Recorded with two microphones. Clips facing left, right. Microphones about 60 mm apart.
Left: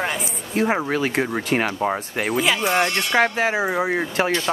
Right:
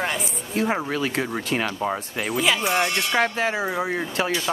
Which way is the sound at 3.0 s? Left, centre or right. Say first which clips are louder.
Left 3 dB; left.